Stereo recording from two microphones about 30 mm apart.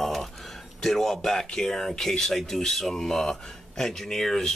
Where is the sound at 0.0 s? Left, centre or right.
Centre.